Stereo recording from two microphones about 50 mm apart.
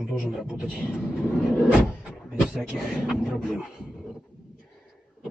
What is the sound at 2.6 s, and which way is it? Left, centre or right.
Speech, centre.